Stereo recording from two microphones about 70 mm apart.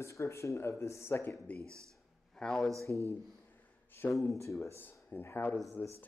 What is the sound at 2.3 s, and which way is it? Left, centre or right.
Speech, centre.